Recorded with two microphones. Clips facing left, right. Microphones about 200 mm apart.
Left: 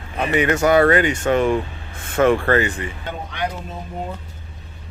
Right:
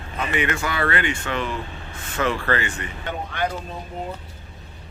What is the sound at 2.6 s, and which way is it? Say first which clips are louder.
Speech: left 5 dB; 30° left (ahead or behind).